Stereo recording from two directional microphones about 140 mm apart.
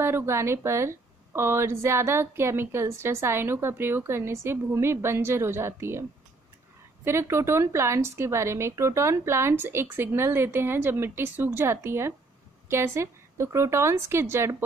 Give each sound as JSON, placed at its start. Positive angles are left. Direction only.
{"t": 0.0, "sound": "a woman's voice", "side_deg": -20}
{"t": 7.1, "sound": "a woman's voice", "side_deg": -20}